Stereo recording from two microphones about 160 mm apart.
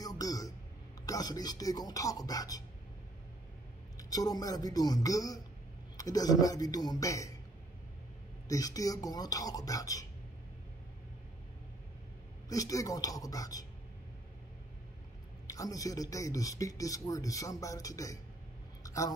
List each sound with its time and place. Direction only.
0.0 s a sound: 25° left (ahead or behind)
1.0 s speech: 20° left (ahead or behind)
4.1 s speech: 25° left (ahead or behind)
8.5 s speech: 20° left (ahead or behind)
12.4 s speech: 20° left (ahead or behind)
15.4 s speech: 20° left (ahead or behind)
18.8 s a sound: 20° left (ahead or behind)